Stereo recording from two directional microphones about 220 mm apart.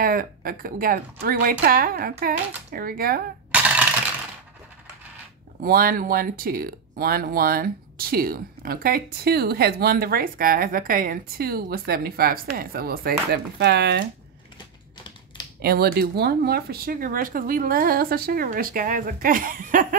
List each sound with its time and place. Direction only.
0.0 s speech: 40° right (ahead or behind)
3.5 s coin: 5° right (ahead or behind)
5.6 s speech: 40° right (ahead or behind)
15.6 s speech: 45° right (ahead or behind)